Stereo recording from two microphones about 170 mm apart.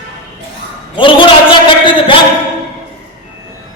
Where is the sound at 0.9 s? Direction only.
30° left (ahead or behind).